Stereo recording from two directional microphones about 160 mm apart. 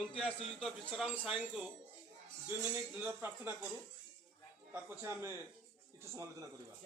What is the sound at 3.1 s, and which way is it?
Speech, 15° right (ahead or behind).